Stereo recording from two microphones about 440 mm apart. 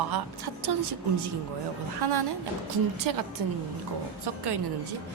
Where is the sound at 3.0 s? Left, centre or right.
Right.